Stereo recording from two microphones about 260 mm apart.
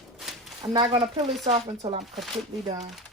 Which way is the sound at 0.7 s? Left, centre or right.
Centre.